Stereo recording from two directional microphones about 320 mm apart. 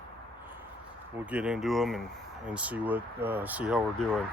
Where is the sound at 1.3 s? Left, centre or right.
Centre.